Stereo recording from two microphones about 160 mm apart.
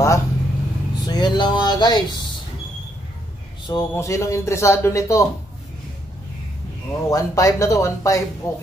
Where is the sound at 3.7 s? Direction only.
20° left (ahead or behind).